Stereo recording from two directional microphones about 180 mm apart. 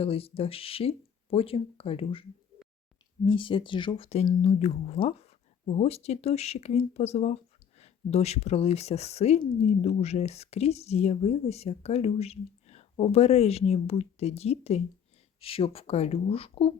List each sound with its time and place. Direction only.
0.0 s speech: 35° left (ahead or behind)
3.2 s speech: 30° left (ahead or behind)